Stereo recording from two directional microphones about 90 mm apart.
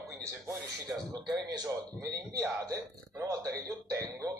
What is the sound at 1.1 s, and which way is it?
A man's voice, 50° right (ahead or behind).